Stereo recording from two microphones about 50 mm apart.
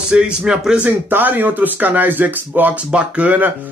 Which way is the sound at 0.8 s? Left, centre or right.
Right.